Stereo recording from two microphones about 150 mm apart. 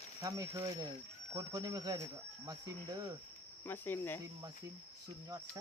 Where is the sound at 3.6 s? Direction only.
15° left (ahead or behind).